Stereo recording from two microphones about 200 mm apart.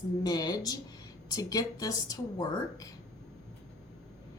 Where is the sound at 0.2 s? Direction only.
20° left (ahead or behind).